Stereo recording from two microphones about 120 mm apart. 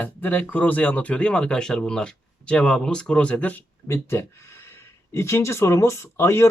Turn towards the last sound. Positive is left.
turn(degrees=25)  # may be behind; listen again after turning